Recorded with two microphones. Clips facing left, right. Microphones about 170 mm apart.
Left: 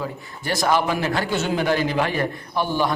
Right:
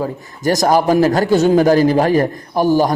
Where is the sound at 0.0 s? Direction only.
40° right (ahead or behind).